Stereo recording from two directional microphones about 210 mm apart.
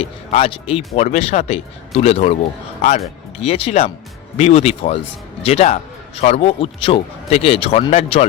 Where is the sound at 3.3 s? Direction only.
30° left (ahead or behind).